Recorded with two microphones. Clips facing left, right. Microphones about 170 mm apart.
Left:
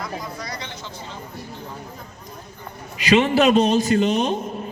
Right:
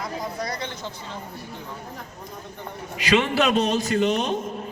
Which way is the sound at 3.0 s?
20° left (ahead or behind).